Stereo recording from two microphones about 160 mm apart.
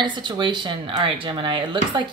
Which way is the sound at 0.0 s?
30° right (ahead or behind).